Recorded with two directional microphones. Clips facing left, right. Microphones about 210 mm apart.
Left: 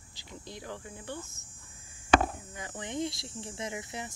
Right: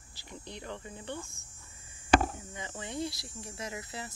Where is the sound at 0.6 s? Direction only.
5° left (ahead or behind).